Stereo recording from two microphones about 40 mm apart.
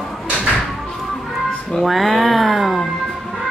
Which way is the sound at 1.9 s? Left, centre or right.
Centre.